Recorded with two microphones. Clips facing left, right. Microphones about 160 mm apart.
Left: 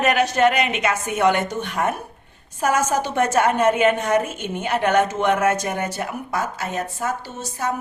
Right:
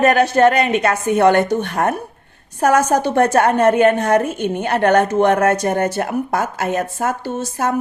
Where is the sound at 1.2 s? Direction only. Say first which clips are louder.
Right 5 dB; 60° right (ahead or behind).